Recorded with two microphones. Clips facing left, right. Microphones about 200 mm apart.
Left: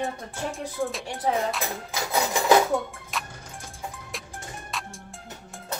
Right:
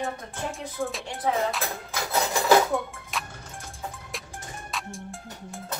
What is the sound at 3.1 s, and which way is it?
Music, centre (ahead or behind).